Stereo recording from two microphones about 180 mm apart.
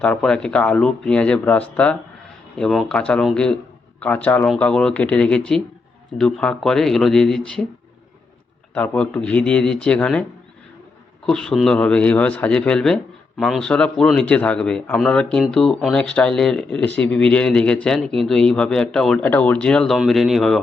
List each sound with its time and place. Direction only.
0.0 s speech: 5° left (ahead or behind)
8.7 s speech: 5° left (ahead or behind)
11.3 s speech: 5° left (ahead or behind)